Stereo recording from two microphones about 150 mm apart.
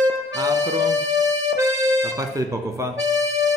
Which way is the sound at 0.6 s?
25° right (ahead or behind).